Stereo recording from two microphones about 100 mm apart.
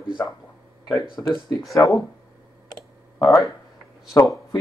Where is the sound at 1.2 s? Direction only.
25° left (ahead or behind).